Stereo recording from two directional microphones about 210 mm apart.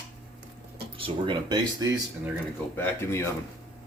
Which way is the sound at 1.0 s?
20° right (ahead or behind).